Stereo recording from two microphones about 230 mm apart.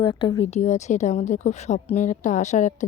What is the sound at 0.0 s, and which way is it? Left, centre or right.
A woman's voice, centre.